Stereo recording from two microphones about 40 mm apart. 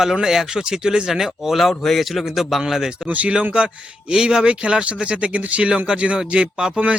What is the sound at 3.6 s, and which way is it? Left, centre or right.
Speech, right.